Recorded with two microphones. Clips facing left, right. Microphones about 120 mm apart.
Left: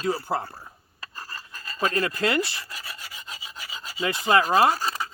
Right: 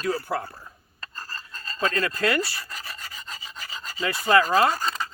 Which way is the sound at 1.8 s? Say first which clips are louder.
Even; 20° left (ahead or behind).